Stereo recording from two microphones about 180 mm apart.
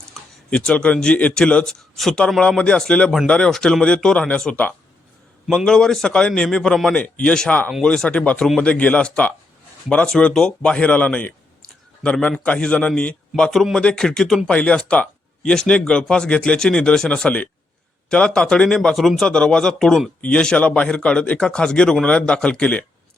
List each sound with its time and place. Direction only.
0.1 s speech: 5° left (ahead or behind)